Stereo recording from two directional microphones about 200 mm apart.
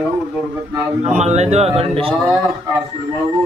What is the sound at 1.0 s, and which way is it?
Speech, 35° right (ahead or behind).